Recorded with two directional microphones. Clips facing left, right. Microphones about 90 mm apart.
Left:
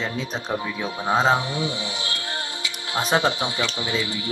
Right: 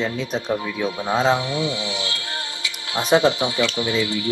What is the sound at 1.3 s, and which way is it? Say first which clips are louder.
Music: right 1 dB; 35° left (ahead or behind).